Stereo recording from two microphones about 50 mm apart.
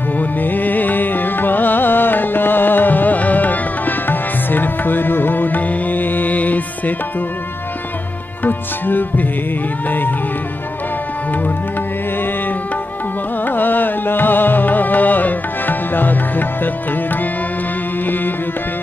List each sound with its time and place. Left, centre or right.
0.2 s music: left
8.5 s music: left
13.5 s music: left